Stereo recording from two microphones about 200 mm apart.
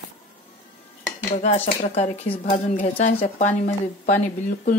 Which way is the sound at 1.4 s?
35° left (ahead or behind).